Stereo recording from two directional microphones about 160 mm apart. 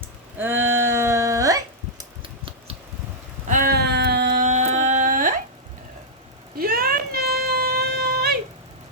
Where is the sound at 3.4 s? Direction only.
60° right (ahead or behind); by 4.4 s 90° right.